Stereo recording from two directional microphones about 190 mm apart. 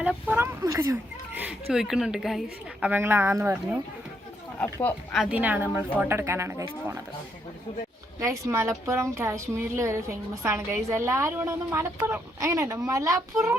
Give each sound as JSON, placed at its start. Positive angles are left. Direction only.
{"t": 0.0, "sound": "a woman's voice", "side_deg": -10}
{"t": 4.6, "sound": "speech", "side_deg": 10}
{"t": 5.2, "sound": "a woman's voice", "side_deg": -10}
{"t": 8.2, "sound": "a woman's voice", "side_deg": -15}